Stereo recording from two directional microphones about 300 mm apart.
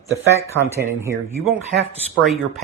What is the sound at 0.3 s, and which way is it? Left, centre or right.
Speech, centre.